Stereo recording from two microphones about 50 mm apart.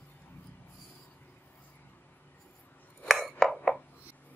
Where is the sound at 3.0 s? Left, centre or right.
Centre.